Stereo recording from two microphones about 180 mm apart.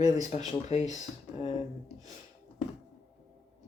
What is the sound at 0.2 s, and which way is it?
Speech, 40° left (ahead or behind).